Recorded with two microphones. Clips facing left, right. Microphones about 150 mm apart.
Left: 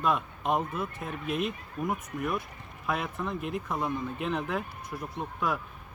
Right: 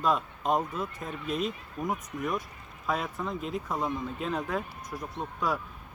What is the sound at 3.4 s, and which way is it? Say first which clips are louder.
Speech: even; 60° left (ahead or behind).